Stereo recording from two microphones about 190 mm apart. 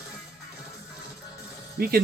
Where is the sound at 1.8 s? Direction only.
50° right (ahead or behind).